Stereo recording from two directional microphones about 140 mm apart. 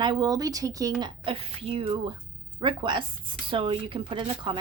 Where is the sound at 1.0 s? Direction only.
40° right (ahead or behind).